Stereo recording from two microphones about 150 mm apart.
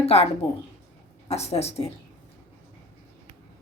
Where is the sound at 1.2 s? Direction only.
45° left (ahead or behind).